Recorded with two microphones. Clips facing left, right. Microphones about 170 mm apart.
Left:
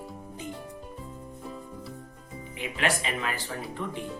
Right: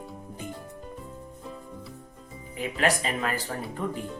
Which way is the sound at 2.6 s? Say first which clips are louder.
Right 3 dB; 40° right (ahead or behind).